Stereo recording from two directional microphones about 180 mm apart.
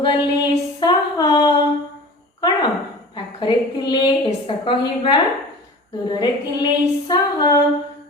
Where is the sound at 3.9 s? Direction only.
25° left (ahead or behind).